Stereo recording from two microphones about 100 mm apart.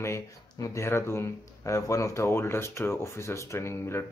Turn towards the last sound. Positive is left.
turn(degrees=25)  # may be behind; listen again after turning